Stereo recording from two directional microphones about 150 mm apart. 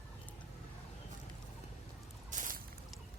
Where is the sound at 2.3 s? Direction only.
60° right (ahead or behind).